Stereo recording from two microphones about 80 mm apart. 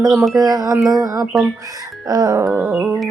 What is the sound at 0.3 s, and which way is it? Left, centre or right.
A woman's voice, right.